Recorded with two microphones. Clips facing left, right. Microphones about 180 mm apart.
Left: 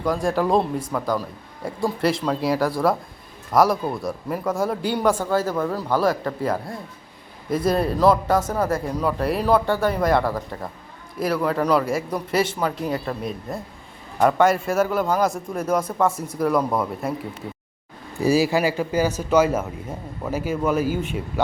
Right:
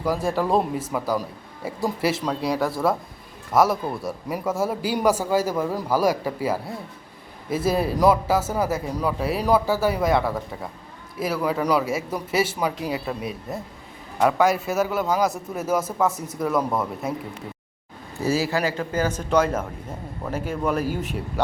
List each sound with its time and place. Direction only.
0.0 s a man's voice: 5° right (ahead or behind)
18.2 s a man's voice: 15° left (ahead or behind)